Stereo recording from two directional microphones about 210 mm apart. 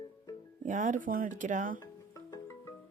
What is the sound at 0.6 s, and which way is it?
Speech, 35° right (ahead or behind).